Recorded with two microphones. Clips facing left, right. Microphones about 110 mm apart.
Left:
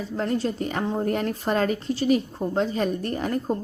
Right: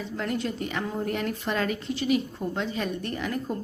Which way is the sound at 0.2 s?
35° left (ahead or behind).